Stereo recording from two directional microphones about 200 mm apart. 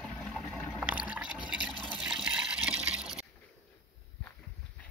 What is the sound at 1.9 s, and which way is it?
Water, centre (ahead or behind).